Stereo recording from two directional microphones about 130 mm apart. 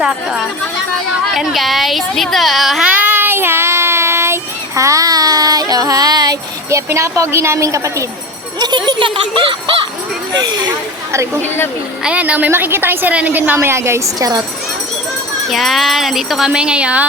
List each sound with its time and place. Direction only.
0.0 s speech: 5° right (ahead or behind)
1.4 s a sound: centre (ahead or behind); by 8.0 s 25° right (ahead or behind)
8.5 s speech: 35° right (ahead or behind)
12.0 s a woman's voice: 10° right (ahead or behind); by 14.4 s 30° right (ahead or behind)
15.4 s speech: centre (ahead or behind)